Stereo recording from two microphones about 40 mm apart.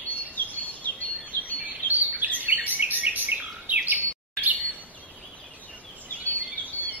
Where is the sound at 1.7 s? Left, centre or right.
Right.